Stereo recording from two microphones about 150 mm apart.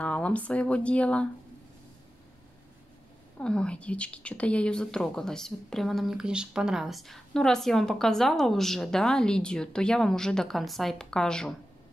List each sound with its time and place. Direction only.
0.0 s speech: 10° left (ahead or behind)
3.3 s speech: 5° left (ahead or behind)